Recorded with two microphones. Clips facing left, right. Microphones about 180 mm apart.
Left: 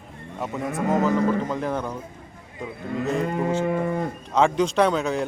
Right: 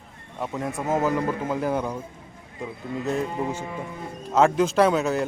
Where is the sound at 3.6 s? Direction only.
65° left (ahead or behind).